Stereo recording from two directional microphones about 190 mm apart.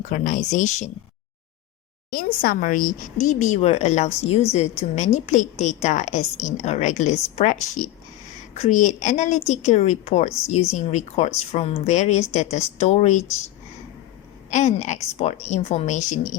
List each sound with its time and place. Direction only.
0.0 s a woman's voice: 40° left (ahead or behind)
2.0 s a woman's voice: 50° left (ahead or behind)
14.5 s a woman's voice: 40° left (ahead or behind)